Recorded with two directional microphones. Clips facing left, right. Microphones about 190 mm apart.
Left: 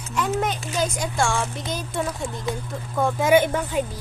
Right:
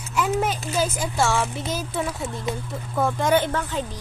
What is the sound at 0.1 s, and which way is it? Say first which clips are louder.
Speech: right 1 dB; 5° right (ahead or behind).